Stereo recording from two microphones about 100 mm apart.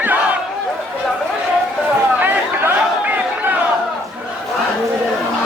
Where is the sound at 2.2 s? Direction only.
20° right (ahead or behind).